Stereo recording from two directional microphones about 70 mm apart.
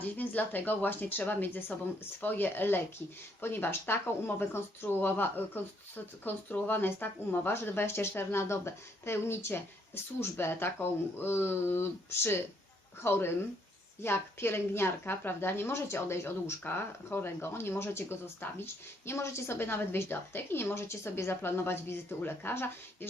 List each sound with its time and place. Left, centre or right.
0.0 s a woman's voice: left